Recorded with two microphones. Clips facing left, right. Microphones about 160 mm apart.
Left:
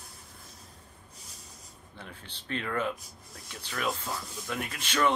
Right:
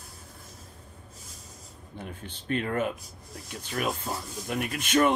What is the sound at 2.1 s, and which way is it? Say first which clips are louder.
Speech: right 6 dB; 50° right (ahead or behind).